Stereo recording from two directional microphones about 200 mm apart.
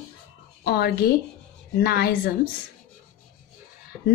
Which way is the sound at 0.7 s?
50° left (ahead or behind).